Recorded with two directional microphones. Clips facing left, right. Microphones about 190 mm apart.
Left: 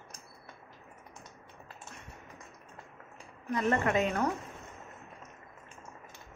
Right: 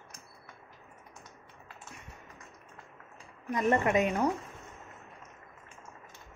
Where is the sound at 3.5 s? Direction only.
15° right (ahead or behind).